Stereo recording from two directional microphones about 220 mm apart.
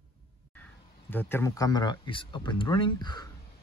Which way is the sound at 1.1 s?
10° left (ahead or behind).